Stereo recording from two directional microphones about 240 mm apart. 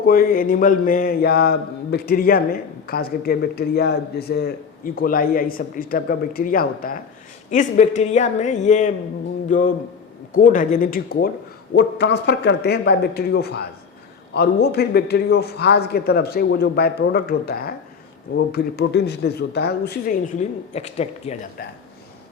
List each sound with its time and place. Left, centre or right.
0.0 s mantra: left
7.5 s a woman's voice: left
9.5 s mantra: left
11.7 s speech: left
14.3 s mantra: left
18.3 s speech: left
21.6 s mantra: left